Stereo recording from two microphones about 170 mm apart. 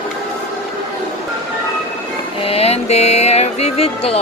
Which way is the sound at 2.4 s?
35° left (ahead or behind).